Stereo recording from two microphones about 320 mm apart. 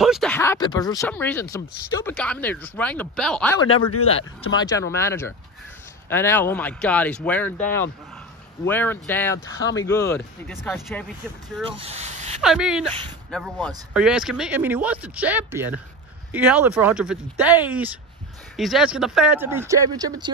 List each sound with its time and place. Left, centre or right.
0.0 s speech: centre
3.9 s speech: left
4.6 s speech: centre
11.8 s a sound: centre
12.4 s speech: centre